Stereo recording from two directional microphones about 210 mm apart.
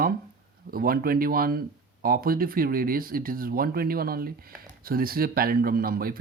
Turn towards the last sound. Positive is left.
turn(degrees=-45)  # may be behind; listen again after turning